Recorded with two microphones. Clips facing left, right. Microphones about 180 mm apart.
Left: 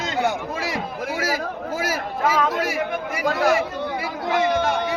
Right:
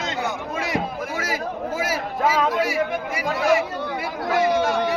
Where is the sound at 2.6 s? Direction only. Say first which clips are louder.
Right 2 dB; 45° left (ahead or behind).